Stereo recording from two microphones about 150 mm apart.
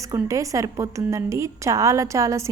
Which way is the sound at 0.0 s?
20° right (ahead or behind).